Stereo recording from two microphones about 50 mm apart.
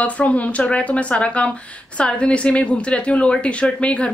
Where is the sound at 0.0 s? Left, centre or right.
Left.